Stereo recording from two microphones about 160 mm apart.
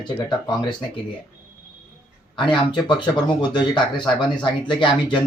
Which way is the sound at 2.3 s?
30° left (ahead or behind).